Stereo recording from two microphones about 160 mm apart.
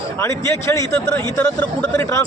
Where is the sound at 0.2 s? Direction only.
15° left (ahead or behind).